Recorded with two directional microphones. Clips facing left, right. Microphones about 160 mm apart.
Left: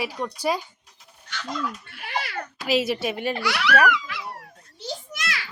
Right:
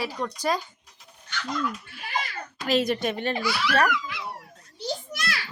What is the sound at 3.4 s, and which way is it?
Speech, 75° left (ahead or behind).